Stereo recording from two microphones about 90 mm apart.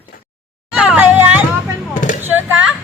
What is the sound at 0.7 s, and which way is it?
Speech, 10° right (ahead or behind).